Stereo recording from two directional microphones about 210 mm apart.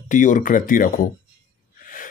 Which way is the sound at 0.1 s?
40° left (ahead or behind).